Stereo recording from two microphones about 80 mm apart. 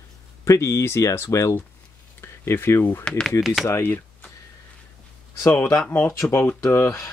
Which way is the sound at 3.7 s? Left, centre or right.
Left.